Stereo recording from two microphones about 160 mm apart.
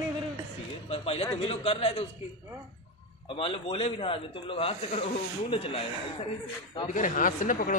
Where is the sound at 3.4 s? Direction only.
35° left (ahead or behind).